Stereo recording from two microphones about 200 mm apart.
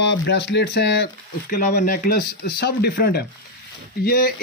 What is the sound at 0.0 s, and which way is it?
Speech, 60° left (ahead or behind).